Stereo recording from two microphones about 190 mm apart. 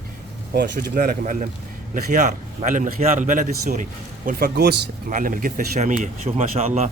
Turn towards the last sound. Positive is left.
turn(degrees=-35)  # may be behind; listen again after turning